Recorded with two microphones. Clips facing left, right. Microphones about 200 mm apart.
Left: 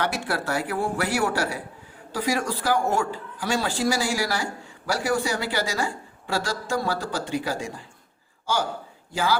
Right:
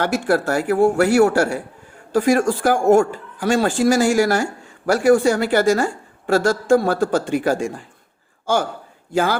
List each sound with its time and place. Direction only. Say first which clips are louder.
0.0 s a woman's voice: right 8 dB; 45° right (ahead or behind)